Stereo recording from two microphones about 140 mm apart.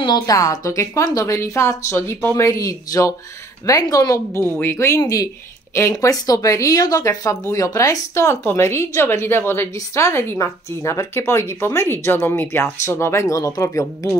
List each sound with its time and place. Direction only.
0.0 s speech: 30° left (ahead or behind)